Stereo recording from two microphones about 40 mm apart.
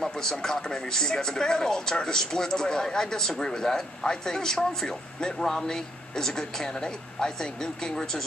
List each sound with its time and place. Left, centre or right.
0.0 s speech: centre